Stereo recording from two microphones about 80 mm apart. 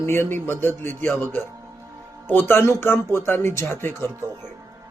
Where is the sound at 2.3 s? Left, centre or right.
Left.